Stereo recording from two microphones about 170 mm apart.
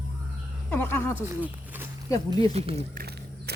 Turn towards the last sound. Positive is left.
turn(degrees=-70)  # may be behind; listen again after turning